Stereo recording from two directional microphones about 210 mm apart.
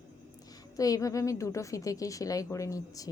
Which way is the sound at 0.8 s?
15° left (ahead or behind).